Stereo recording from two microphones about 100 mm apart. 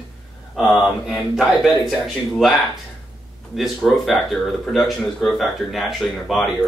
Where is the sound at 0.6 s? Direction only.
5° right (ahead or behind).